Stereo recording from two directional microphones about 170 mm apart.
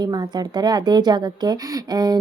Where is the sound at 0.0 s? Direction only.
25° right (ahead or behind).